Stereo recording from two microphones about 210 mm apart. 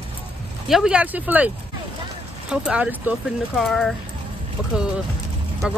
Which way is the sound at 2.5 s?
5° right (ahead or behind).